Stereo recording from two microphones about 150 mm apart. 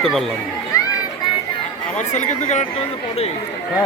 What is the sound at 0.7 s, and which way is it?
Children playing, 20° left (ahead or behind).